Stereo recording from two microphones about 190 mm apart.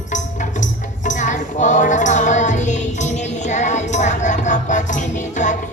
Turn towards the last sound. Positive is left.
turn(degrees=40)  # may be behind; listen again after turning